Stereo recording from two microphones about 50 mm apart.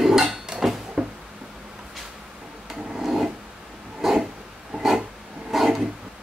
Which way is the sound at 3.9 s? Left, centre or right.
Centre.